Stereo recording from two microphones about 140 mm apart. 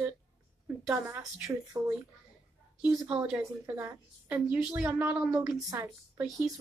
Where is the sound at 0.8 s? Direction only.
15° right (ahead or behind).